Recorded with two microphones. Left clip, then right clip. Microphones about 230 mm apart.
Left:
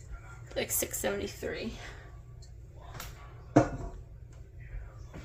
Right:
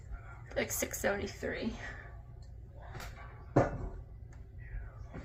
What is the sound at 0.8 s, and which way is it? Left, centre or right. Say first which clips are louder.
Speech: left 1 dB; left.